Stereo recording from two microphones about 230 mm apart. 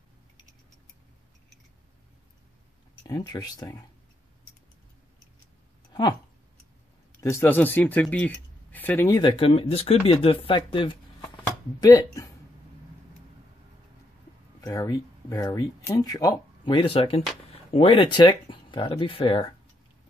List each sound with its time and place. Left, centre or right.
3.1 s speech: centre
7.2 s speech: centre
14.6 s speech: centre